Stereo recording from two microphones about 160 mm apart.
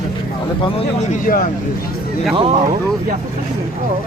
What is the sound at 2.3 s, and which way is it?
Speech, 35° right (ahead or behind).